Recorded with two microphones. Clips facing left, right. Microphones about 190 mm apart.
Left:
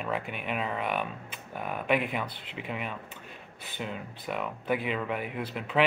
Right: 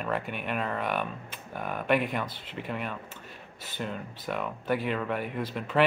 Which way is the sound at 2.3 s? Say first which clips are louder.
Right 1 dB; 45° right (ahead or behind).